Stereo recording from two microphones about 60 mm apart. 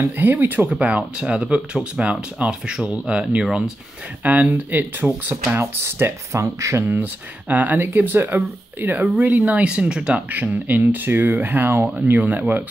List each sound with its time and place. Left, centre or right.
0.0 s speech: right
0.7 s speech: right
4.2 s speech: right
6.3 s speech: right
6.9 s speech: right
10.3 s speech: right